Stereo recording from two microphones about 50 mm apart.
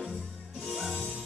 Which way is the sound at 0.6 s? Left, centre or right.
Centre.